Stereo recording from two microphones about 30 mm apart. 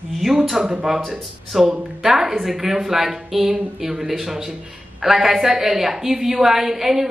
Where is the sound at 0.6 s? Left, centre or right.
Centre.